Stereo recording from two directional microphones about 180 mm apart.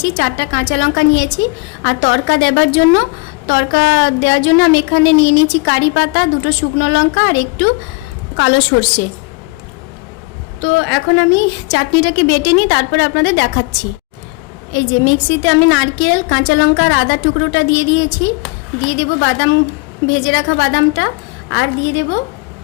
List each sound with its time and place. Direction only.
0.1 s a woman's voice: 90° left
10.6 s a woman's voice: 90° left; by 13.7 s 70° left (ahead or behind)
14.7 s a woman's voice: 90° left